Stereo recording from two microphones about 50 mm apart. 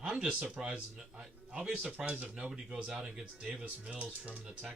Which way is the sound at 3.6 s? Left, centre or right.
Right.